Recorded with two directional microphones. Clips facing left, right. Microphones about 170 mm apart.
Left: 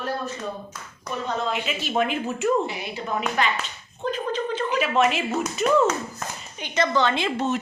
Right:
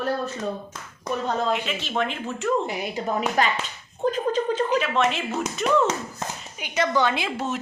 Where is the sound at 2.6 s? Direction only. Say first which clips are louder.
Right 3 dB; 45° right (ahead or behind).